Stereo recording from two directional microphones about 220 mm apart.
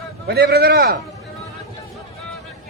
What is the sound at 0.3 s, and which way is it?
Speech, 50° right (ahead or behind).